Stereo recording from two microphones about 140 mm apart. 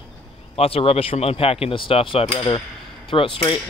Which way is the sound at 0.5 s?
45° left (ahead or behind).